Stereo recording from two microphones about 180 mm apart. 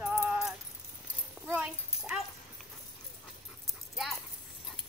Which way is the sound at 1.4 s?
10° right (ahead or behind).